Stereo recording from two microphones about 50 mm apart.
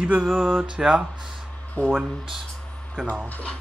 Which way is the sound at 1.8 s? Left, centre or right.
Left.